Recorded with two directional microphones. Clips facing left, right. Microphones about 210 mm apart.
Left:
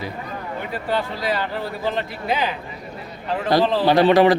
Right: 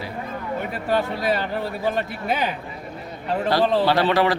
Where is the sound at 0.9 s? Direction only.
45° right (ahead or behind).